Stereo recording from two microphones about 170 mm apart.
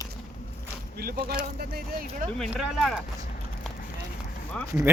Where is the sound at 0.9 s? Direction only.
60° right (ahead or behind).